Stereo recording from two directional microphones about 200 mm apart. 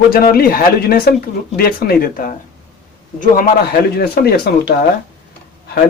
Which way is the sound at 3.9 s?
50° left (ahead or behind).